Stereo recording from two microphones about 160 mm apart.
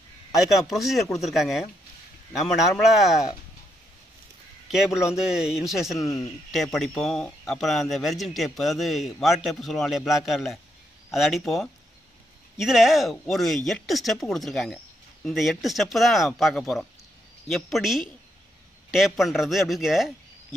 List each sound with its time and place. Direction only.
0.5 s speech: centre (ahead or behind)
4.6 s speech: 5° right (ahead or behind)
5.9 s speech: 20° left (ahead or behind)
6.5 s speech: centre (ahead or behind)